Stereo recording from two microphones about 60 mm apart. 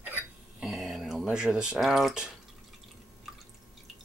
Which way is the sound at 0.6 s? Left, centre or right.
Centre.